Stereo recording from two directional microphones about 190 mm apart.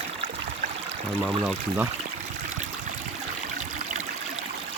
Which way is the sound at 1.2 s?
25° right (ahead or behind).